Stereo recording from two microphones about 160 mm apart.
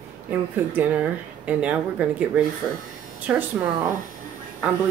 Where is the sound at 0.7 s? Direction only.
10° right (ahead or behind).